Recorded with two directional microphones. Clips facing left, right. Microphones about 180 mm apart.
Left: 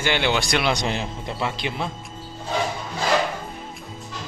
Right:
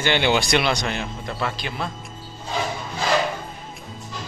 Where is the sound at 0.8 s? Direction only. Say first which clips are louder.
Left 1 dB; 25° left (ahead or behind).